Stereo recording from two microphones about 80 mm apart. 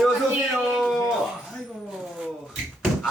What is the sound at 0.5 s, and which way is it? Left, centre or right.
Speech, centre.